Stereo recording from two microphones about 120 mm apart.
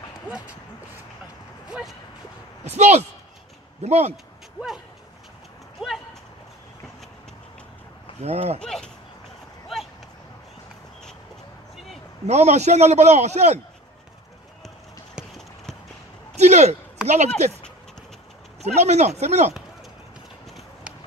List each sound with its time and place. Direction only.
1.7 s speech: 5° right (ahead or behind)
2.6 s a man's voice: 65° right (ahead or behind)
5.8 s speech: 5° right (ahead or behind)
8.2 s speech: 60° right (ahead or behind)
8.5 s speech: 5° left (ahead or behind)
11.7 s a sound: centre (ahead or behind)
12.3 s a man's voice: 65° right (ahead or behind)
16.3 s speech: 70° right (ahead or behind)
17.0 s speech: 10° right (ahead or behind)
17.4 s speech: 65° right (ahead or behind)